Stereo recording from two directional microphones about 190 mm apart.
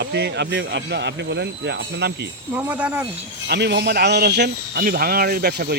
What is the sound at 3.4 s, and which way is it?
Speech, 65° right (ahead or behind).